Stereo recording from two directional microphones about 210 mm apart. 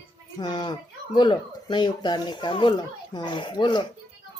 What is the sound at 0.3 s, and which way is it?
Speech, 20° left (ahead or behind).